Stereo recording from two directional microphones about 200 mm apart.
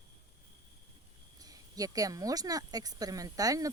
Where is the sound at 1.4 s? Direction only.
20° right (ahead or behind).